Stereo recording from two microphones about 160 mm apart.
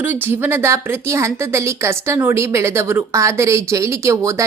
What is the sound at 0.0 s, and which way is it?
A woman's voice, 10° right (ahead or behind).